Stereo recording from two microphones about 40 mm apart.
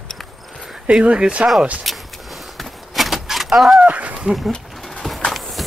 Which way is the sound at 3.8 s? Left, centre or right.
Right.